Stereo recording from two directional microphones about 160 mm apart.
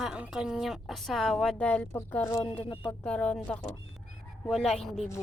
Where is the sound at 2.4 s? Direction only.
30° left (ahead or behind).